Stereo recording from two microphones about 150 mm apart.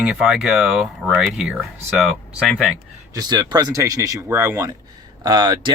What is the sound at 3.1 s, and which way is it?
Speech, 30° right (ahead or behind).